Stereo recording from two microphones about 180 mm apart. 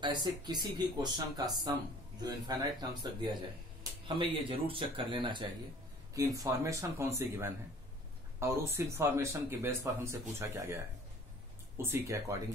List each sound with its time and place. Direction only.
0.0 s speech: 25° right (ahead or behind)
4.1 s speech: 30° right (ahead or behind)